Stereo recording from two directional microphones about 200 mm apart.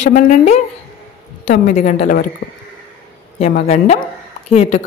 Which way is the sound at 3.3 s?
35° left (ahead or behind).